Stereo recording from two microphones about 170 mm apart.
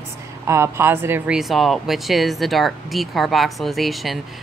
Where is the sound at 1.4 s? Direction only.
Centre (ahead or behind).